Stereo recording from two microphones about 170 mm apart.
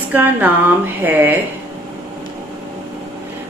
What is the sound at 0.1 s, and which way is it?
A woman's voice, 10° right (ahead or behind).